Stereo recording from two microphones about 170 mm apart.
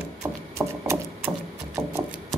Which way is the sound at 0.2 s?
15° right (ahead or behind).